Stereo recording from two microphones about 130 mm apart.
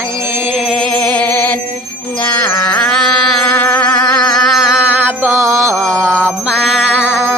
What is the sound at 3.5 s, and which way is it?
Music, 15° left (ahead or behind).